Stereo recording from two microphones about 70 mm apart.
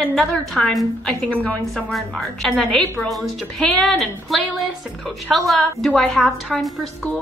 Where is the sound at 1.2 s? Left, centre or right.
Centre.